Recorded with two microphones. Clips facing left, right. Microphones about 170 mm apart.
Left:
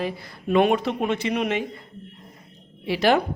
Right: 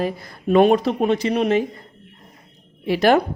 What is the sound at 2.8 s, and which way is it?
Speech, 45° right (ahead or behind).